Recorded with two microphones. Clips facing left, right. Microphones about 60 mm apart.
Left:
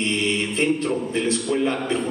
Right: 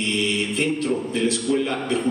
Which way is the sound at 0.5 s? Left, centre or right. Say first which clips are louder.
Left 1 dB; left.